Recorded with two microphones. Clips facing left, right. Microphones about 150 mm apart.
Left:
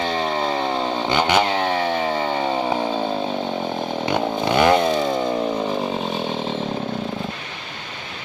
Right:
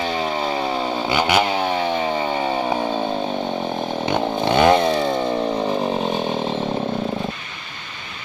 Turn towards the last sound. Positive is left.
turn(degrees=-5)  # may be behind; listen again after turning